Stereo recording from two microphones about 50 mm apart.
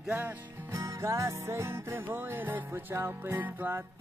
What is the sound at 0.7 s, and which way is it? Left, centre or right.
Music, right.